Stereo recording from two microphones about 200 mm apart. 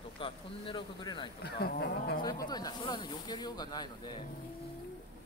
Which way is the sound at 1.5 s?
55° left (ahead or behind).